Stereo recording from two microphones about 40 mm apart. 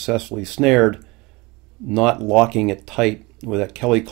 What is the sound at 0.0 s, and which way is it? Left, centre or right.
Speech, centre.